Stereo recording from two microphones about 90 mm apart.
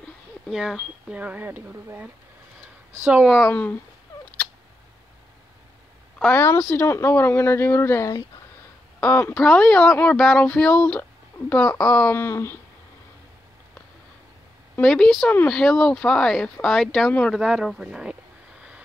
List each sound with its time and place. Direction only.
0.5 s speech: 5° right (ahead or behind)
6.3 s speech: 30° left (ahead or behind)
6.6 s speech: 15° left (ahead or behind)
6.9 s speech: 25° left (ahead or behind)
9.3 s speech: 5° left (ahead or behind)
12.1 s speech: 30° left (ahead or behind)
14.8 s speech: 5° left (ahead or behind)